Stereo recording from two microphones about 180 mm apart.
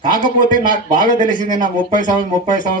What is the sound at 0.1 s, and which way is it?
Speech, 50° left (ahead or behind).